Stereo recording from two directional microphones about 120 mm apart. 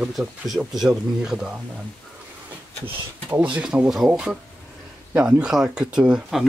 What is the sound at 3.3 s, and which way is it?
Speech, 10° right (ahead or behind).